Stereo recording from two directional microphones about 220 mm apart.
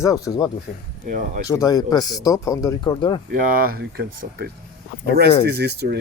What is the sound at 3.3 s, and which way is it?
Speech, 40° right (ahead or behind).